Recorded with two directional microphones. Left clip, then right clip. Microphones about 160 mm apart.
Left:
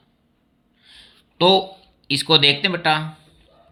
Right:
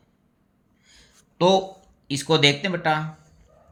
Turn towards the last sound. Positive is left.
turn(degrees=15)  # may be behind; listen again after turning